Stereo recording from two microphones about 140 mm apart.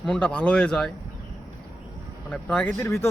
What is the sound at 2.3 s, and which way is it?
Speech, 10° left (ahead or behind).